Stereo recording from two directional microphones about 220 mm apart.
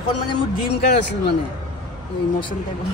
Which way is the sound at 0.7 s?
50° left (ahead or behind).